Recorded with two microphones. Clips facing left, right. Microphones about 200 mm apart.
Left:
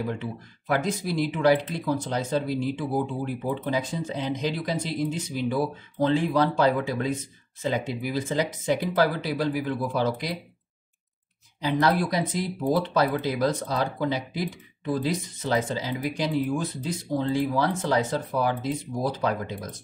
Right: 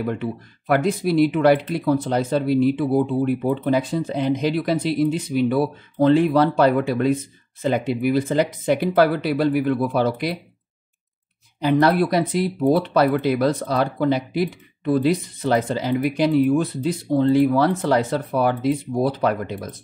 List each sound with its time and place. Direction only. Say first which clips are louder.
0.1 s speech: right 6 dB; 60° right (ahead or behind)
11.6 s speech: right 6 dB; 60° right (ahead or behind)